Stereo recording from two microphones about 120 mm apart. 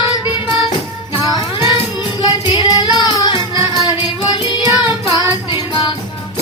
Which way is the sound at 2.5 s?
35° left (ahead or behind).